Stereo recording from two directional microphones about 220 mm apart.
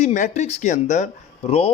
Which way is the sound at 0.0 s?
35° left (ahead or behind).